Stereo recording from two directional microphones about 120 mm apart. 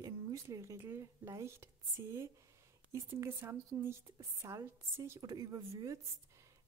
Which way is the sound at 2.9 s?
25° right (ahead or behind).